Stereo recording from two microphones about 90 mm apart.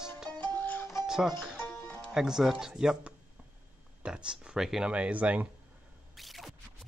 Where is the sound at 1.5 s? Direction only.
25° left (ahead or behind).